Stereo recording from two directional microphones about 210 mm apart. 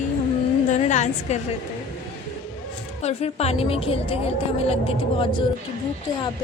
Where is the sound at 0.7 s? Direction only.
35° left (ahead or behind).